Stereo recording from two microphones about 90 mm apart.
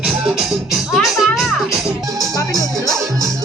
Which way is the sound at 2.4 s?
45° left (ahead or behind).